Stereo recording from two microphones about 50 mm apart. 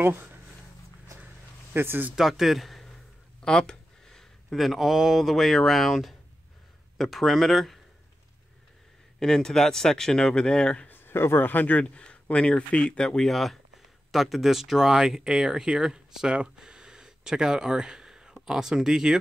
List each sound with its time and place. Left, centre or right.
0.0 s speech: right
1.7 s speech: right
2.1 s speech: centre
3.4 s a sound: centre
4.6 s speech: centre
9.2 s speech: centre
10.9 s a sound: left
11.4 s speech: left
11.8 s speech: left
13.3 s speech: centre